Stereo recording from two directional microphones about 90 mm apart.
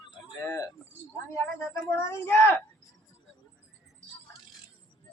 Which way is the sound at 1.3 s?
30° left (ahead or behind).